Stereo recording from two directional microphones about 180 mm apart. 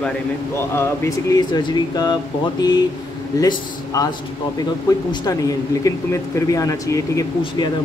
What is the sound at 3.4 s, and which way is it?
Speech, 20° left (ahead or behind).